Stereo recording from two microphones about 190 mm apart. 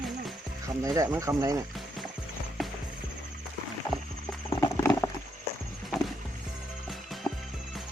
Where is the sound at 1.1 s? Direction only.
15° right (ahead or behind).